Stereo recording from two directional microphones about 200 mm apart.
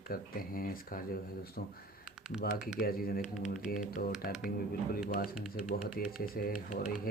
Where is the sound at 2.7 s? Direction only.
50° left (ahead or behind).